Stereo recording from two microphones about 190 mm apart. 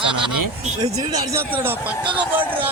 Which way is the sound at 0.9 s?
15° right (ahead or behind).